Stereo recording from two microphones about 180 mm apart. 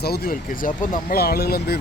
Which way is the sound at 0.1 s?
55° left (ahead or behind).